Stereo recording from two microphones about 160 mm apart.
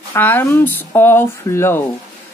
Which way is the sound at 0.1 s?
15° left (ahead or behind).